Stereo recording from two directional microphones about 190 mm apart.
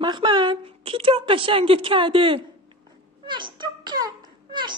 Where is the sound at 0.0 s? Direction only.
25° right (ahead or behind).